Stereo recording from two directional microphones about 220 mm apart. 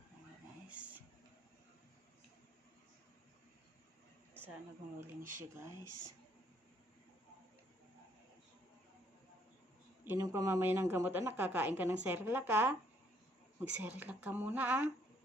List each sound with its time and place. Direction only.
0.7 s a sound: 5° right (ahead or behind)
5.2 s speech: 35° right (ahead or behind)
5.9 s speech: 90° right
10.0 s a woman's voice: 10° right (ahead or behind)